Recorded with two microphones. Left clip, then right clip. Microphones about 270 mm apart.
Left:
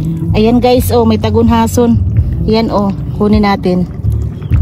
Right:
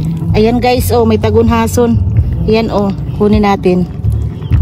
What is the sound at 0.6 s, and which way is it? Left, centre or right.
Speech, right.